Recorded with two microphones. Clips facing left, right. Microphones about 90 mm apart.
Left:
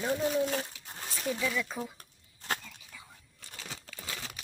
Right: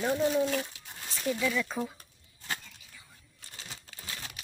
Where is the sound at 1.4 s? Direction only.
5° left (ahead or behind).